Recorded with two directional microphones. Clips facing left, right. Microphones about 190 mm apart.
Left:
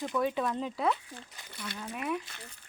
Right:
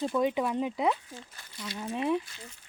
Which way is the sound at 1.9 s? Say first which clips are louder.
Right 6 dB; 30° right (ahead or behind).